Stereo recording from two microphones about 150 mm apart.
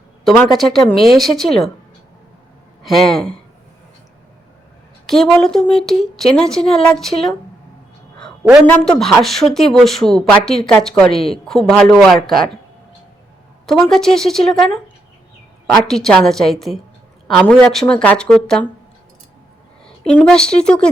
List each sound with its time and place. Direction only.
0.6 s speech: centre (ahead or behind)
2.8 s speech: centre (ahead or behind)
5.0 s speech: centre (ahead or behind)
8.6 s speech: 10° left (ahead or behind)
11.1 s a woman's voice: 40° left (ahead or behind)
11.4 s speech: 5° left (ahead or behind)
13.9 s speech: centre (ahead or behind)
19.8 s a woman's voice: 5° left (ahead or behind)